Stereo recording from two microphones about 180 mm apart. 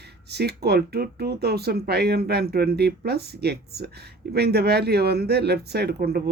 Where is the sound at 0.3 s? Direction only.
65° right (ahead or behind).